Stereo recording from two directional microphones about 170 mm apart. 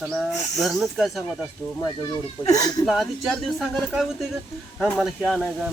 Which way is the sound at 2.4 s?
20° left (ahead or behind).